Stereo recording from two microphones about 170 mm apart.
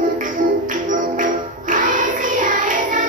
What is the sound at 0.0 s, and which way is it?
Music, 50° right (ahead or behind).